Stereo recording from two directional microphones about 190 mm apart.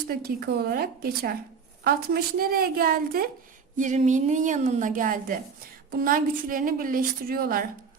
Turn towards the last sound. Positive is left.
turn(degrees=-50)  # may be behind; listen again after turning